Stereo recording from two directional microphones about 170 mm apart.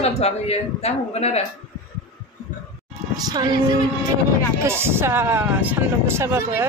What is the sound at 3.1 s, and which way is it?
Speech, 20° right (ahead or behind).